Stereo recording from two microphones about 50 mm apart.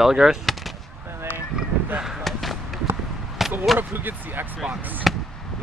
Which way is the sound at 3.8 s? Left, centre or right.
Right.